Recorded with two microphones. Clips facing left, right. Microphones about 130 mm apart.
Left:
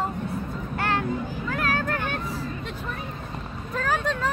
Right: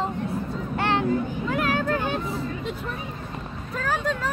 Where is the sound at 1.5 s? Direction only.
15° right (ahead or behind).